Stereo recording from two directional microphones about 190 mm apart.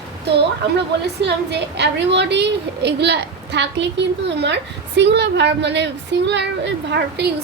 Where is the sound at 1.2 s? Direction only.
65° right (ahead or behind).